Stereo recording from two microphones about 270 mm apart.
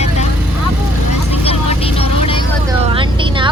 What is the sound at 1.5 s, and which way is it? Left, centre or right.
Vehicle, left.